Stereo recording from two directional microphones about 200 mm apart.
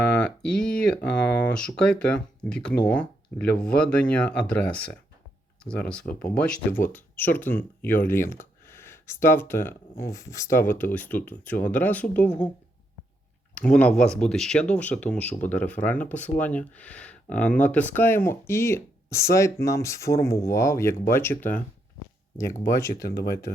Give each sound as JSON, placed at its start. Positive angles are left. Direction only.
{"t": 0.0, "sound": "speech", "side_deg": 5}
{"t": 13.5, "sound": "speech", "side_deg": 5}
{"t": 22.6, "sound": "speech", "side_deg": 15}
{"t": 22.9, "sound": "speech", "side_deg": 50}